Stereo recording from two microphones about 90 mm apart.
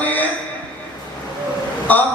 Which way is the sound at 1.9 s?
20° left (ahead or behind).